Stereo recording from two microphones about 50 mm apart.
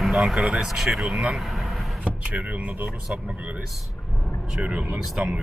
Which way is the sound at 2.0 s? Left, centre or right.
Right.